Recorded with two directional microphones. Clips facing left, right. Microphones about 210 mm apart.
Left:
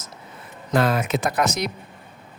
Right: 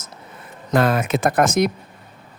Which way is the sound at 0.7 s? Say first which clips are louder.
Right 2 dB; 50° right (ahead or behind).